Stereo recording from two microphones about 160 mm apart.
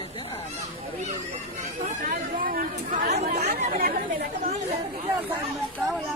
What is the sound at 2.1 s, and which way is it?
Chatter, 60° right (ahead or behind).